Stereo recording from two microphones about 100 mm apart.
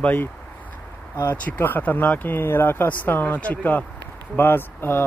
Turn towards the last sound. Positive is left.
turn(degrees=20)  # may be behind; listen again after turning